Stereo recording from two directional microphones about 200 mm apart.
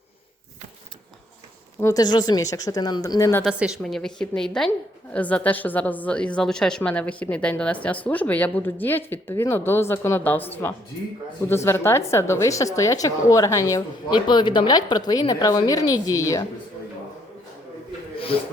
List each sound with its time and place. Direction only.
1.8 s a woman's voice: 20° left (ahead or behind)
3.4 s a woman's voice: centre (ahead or behind); by 16.4 s 15° left (ahead or behind)